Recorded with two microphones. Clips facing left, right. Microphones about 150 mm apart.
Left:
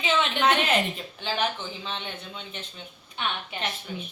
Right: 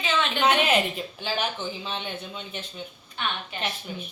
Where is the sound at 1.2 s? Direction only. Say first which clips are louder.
Left 1 dB; 5° right (ahead or behind).